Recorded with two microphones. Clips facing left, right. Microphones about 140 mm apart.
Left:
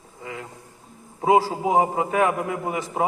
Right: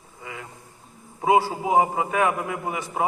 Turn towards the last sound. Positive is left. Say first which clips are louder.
# left 2 dB
turn(degrees=35)  # may be behind; listen again after turning